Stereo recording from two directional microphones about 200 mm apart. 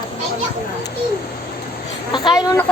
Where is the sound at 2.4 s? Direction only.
15° left (ahead or behind).